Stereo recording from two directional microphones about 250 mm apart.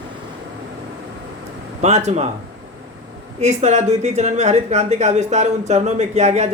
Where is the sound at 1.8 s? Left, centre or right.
Right.